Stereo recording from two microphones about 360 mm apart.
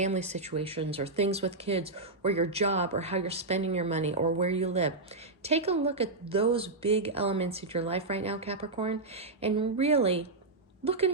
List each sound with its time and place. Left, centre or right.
0.0 s speech: centre